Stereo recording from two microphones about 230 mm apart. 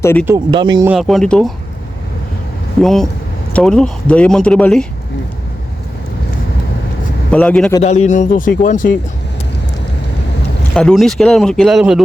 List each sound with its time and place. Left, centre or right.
0.0 s speech: centre
0.3 s speech: centre
0.9 s speech: centre
2.8 s speech: centre
7.3 s a man's voice: centre
7.8 s speech: left
10.8 s speech: centre